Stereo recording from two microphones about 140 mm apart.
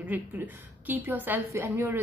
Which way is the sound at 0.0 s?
10° right (ahead or behind).